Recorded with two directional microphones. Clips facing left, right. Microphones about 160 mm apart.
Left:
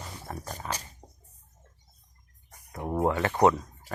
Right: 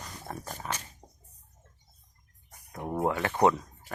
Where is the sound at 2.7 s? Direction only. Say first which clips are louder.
Left 2 dB; 10° left (ahead or behind).